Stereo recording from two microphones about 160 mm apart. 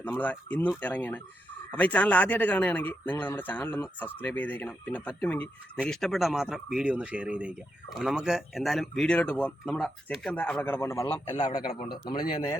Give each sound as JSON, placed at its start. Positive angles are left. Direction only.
{"t": 0.0, "sound": "speech", "side_deg": 10}
{"t": 11.8, "sound": "speech", "side_deg": 30}